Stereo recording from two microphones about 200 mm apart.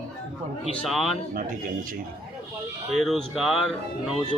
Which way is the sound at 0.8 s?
Centre (ahead or behind).